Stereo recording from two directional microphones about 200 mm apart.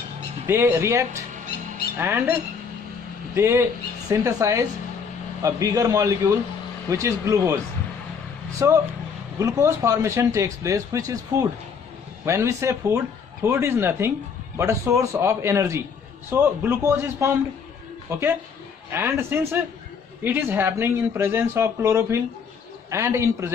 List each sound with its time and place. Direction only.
0.5 s speech: 10° right (ahead or behind)
3.3 s speech: 15° right (ahead or behind)
12.3 s speech: 15° right (ahead or behind)